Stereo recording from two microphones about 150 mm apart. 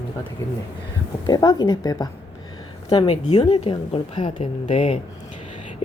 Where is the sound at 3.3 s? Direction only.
30° left (ahead or behind).